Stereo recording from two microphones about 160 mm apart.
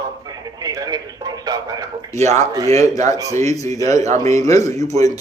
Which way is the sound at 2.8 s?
20° left (ahead or behind).